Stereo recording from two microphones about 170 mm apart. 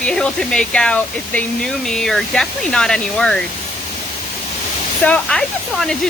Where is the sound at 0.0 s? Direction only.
5° left (ahead or behind).